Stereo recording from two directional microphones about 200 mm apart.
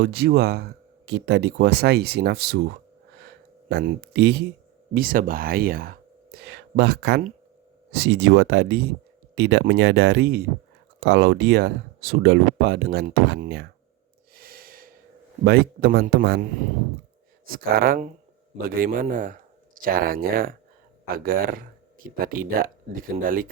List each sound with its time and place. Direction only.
0.0 s speech: 50° right (ahead or behind)
3.7 s speech: 55° right (ahead or behind)
4.9 s speech: 45° right (ahead or behind)
14.3 s snort: 45° right (ahead or behind)
15.4 s speech: 50° right (ahead or behind)